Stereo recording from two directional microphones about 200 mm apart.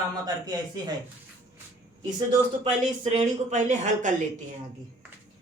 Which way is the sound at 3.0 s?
35° right (ahead or behind).